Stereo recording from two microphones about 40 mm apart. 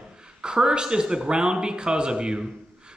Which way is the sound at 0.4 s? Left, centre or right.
Centre.